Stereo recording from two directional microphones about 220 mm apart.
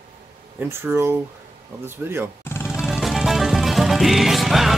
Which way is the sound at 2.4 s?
10° left (ahead or behind).